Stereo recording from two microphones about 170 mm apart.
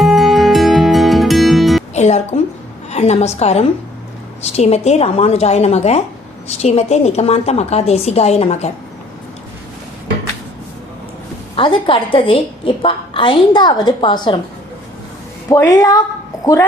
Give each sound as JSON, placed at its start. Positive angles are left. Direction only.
{"t": 0.0, "sound": "music", "side_deg": 0}
{"t": 1.9, "sound": "music", "side_deg": 40}
{"t": 2.9, "sound": "a woman's voice", "side_deg": 40}
{"t": 11.5, "sound": "a woman's voice", "side_deg": 30}
{"t": 15.4, "sound": "a woman's voice", "side_deg": 20}